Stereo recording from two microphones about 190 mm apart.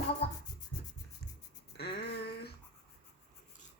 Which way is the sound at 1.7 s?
60° left (ahead or behind).